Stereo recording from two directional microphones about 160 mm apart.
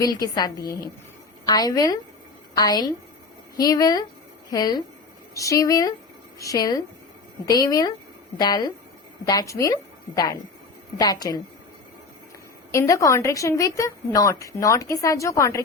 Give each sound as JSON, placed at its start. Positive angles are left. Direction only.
{"t": 0.0, "sound": "a woman's voice", "side_deg": 25}
{"t": 11.0, "sound": "a woman's voice", "side_deg": 25}
{"t": 12.7, "sound": "a woman's voice", "side_deg": 20}